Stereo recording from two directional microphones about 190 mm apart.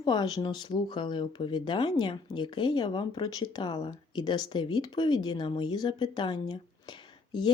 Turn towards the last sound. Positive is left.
turn(degrees=25)  # may be behind; listen again after turning